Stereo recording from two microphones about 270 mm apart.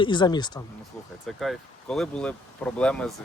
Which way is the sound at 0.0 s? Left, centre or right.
Centre.